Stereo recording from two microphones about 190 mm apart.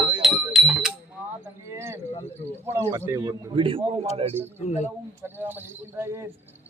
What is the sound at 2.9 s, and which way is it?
A man's voice, 15° right (ahead or behind).